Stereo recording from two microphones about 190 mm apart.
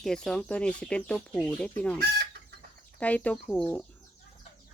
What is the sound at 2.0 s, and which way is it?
Chicken, 55° right (ahead or behind).